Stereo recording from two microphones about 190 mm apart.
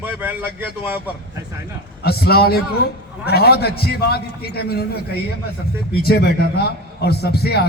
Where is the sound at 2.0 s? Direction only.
55° left (ahead or behind).